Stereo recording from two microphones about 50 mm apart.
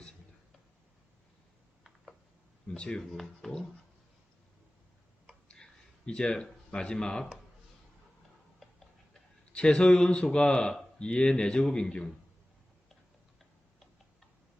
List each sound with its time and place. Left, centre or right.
2.7 s speech: centre
3.0 s speech: centre
6.1 s speech: centre
9.5 s speech: centre